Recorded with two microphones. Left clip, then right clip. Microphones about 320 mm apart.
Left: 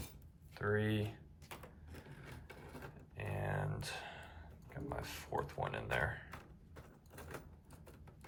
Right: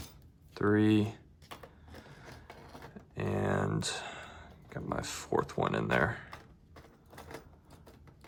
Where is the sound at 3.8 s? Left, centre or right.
Centre.